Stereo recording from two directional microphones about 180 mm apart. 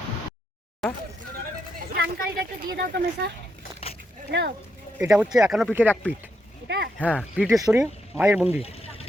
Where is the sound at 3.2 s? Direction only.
65° right (ahead or behind).